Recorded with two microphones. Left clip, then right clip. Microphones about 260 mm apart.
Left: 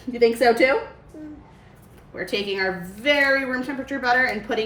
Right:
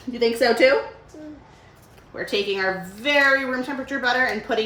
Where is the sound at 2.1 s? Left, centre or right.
Centre.